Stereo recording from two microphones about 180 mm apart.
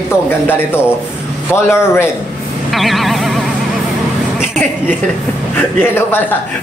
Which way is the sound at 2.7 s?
Centre (ahead or behind).